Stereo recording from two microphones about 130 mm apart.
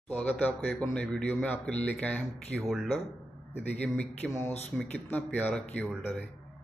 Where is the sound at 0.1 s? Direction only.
10° left (ahead or behind).